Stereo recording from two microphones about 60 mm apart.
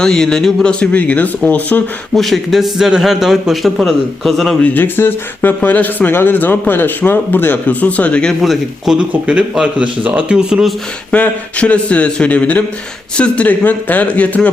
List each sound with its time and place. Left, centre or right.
0.0 s a man's voice: centre; by 1.8 s left
2.1 s a man's voice: centre
4.6 s speech: left
8.4 s speech: centre
9.2 s speech: centre
11.1 s a man's voice: left